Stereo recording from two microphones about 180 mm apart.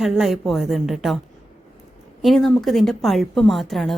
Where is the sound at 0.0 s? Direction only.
Centre (ahead or behind).